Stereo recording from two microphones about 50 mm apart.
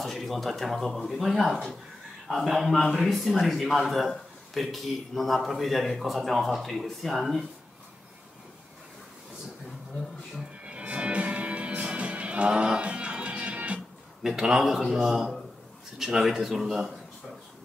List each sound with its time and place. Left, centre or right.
0.0 s a man's voice: centre
10.6 s music: right
14.2 s a man's voice: centre